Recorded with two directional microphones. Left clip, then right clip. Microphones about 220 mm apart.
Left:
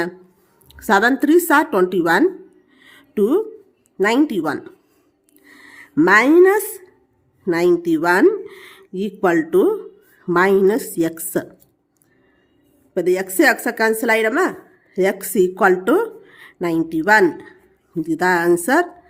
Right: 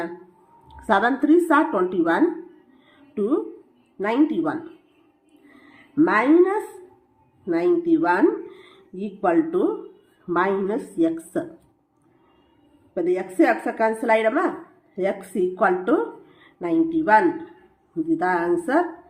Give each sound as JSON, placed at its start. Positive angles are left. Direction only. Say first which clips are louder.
{"t": 0.7, "sound": "speech", "louder": "left 5 dB", "side_deg": 40}
{"t": 2.8, "sound": "music", "louder": "left 7 dB", "side_deg": 45}
{"t": 3.9, "sound": "speech", "louder": "left 4 dB", "side_deg": 45}
{"t": 5.6, "sound": "a woman's voice", "louder": "left 5 dB", "side_deg": 45}
{"t": 12.9, "sound": "speech", "louder": "left 5 dB", "side_deg": 45}
{"t": 15.5, "sound": "speech", "louder": "left 3 dB", "side_deg": 45}